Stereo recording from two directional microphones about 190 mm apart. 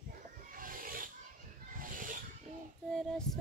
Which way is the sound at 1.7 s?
45° right (ahead or behind).